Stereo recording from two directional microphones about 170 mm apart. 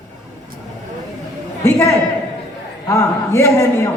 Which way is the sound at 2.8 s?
15° left (ahead or behind).